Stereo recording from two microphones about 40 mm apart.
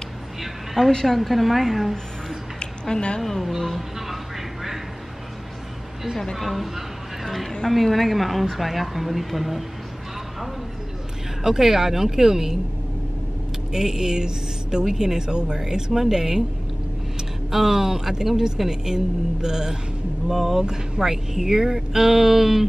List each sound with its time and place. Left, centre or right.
0.4 s a sound: centre
1.0 s a woman's voice: centre
2.6 s a sound: left
3.2 s speech: centre
6.3 s a woman's voice: centre
11.4 s speech: centre
13.7 s speech: centre
17.5 s speech: centre